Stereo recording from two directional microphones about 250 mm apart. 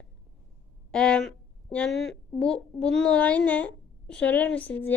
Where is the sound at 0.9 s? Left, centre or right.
Centre.